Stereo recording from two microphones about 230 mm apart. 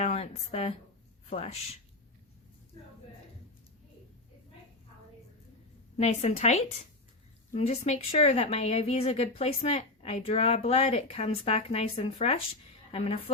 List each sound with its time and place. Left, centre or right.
0.0 s a woman's voice: left
6.0 s a woman's voice: left